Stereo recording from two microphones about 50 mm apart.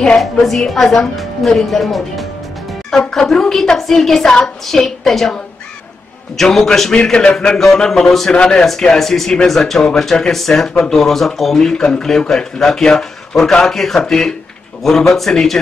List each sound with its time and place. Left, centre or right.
0.2 s a woman's voice: centre
7.0 s a woman's voice: centre